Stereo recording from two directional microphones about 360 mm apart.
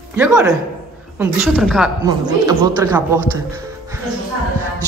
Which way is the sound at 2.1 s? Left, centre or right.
Centre.